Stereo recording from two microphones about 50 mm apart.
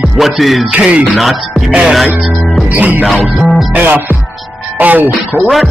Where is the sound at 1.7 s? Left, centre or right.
Centre.